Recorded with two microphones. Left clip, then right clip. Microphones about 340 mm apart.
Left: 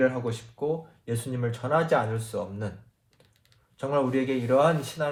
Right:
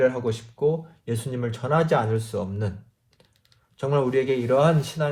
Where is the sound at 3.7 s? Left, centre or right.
Right.